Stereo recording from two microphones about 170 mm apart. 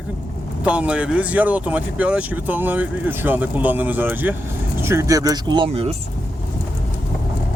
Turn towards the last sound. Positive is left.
turn(degrees=-35)  # may be behind; listen again after turning